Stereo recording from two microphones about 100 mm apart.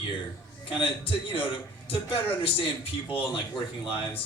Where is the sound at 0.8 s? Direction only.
65° left (ahead or behind).